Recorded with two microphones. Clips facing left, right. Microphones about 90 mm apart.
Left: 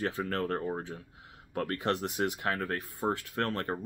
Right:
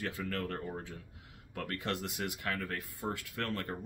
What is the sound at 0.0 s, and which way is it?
Speech, 40° left (ahead or behind).